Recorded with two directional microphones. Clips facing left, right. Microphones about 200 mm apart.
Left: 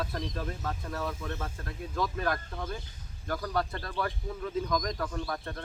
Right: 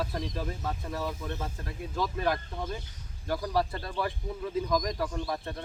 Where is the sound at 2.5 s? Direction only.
15° right (ahead or behind).